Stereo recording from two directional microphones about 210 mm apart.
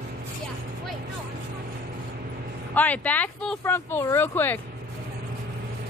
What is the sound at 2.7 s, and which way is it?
Speech, 5° left (ahead or behind).